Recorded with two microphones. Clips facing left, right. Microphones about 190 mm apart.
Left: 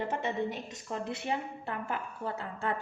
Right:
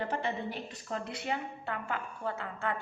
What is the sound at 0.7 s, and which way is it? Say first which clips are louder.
A woman's voice: left 2 dB; 25° left (ahead or behind).